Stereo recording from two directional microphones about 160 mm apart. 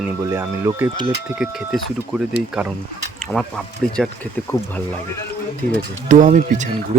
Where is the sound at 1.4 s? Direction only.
5° right (ahead or behind).